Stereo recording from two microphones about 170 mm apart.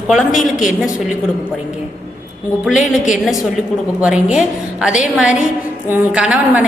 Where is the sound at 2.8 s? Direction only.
45° left (ahead or behind).